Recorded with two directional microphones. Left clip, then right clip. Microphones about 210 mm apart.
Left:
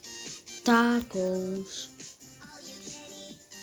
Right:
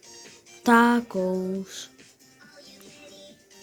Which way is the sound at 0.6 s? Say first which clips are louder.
Right 5 dB; 20° right (ahead or behind).